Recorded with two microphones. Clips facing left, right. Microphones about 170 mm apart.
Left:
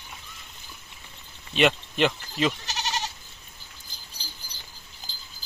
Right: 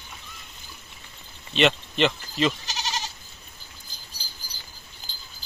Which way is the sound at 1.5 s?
10° left (ahead or behind).